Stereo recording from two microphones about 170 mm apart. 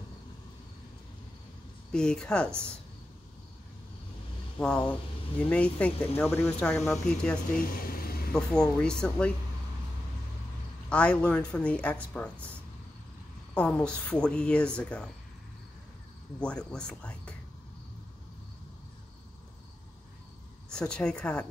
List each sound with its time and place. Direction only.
1.9 s a woman's voice: 5° left (ahead or behind)
4.6 s a woman's voice: 5° left (ahead or behind)
7.5 s a sound: 55° left (ahead or behind)
8.3 s a woman's voice: 5° left (ahead or behind)
10.9 s a woman's voice: 5° left (ahead or behind)
13.6 s a woman's voice: 5° left (ahead or behind)
16.3 s a woman's voice: 5° left (ahead or behind)
20.7 s a woman's voice: 5° left (ahead or behind)